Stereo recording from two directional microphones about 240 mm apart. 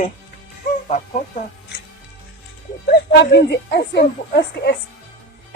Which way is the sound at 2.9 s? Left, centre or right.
Left.